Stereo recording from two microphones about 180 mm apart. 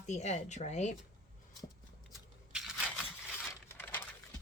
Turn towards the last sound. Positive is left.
turn(degrees=10)  # may be behind; listen again after turning